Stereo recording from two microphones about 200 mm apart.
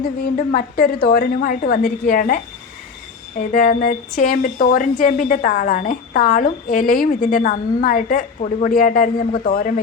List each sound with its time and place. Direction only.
0.0 s a woman's voice: 50° left (ahead or behind)